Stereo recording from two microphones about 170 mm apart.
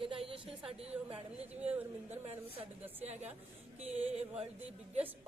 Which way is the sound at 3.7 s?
40° right (ahead or behind).